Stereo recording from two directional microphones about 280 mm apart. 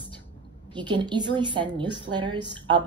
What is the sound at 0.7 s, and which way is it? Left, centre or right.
A woman's voice, centre.